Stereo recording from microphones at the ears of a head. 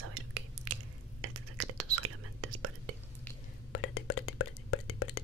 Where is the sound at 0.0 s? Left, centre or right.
Right.